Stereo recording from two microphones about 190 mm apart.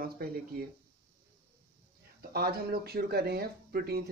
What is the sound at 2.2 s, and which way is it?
Speech, 55° right (ahead or behind).